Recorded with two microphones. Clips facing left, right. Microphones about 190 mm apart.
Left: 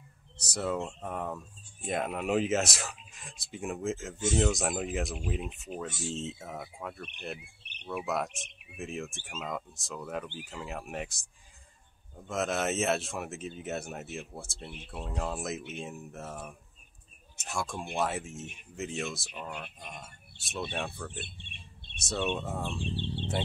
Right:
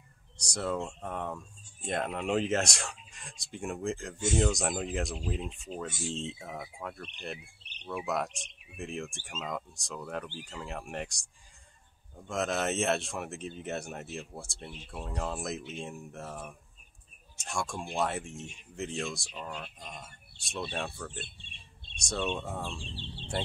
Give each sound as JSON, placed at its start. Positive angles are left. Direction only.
{"t": 0.4, "sound": "speech", "side_deg": 5}
{"t": 12.3, "sound": "speech", "side_deg": 0}
{"t": 21.2, "sound": "bird", "side_deg": 60}
{"t": 21.9, "sound": "speech", "side_deg": 5}
{"t": 22.8, "sound": "speech", "side_deg": 60}